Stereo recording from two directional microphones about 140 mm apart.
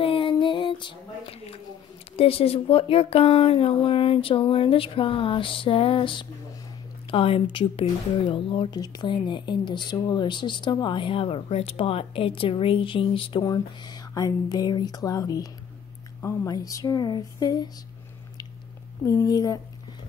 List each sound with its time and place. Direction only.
0.0 s female singing: 40° left (ahead or behind)
2.1 s speech: 45° left (ahead or behind)
19.0 s speech: 25° left (ahead or behind)